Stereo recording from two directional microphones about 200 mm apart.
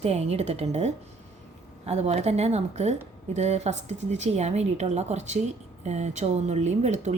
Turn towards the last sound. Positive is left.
turn(degrees=-35)  # may be behind; listen again after turning